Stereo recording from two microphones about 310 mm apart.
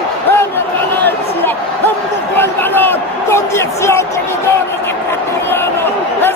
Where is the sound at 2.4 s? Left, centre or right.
Centre.